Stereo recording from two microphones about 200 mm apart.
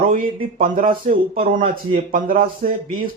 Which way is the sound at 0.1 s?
40° right (ahead or behind).